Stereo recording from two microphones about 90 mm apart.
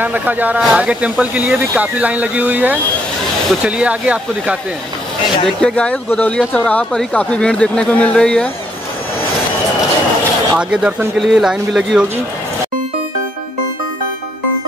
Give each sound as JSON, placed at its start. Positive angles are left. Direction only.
{"t": 0.0, "sound": "speech", "side_deg": -20}
{"t": 5.6, "sound": "speech", "side_deg": 10}
{"t": 10.5, "sound": "speech", "side_deg": -10}